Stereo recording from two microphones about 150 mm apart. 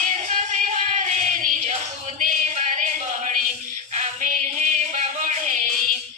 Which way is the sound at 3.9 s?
55° right (ahead or behind).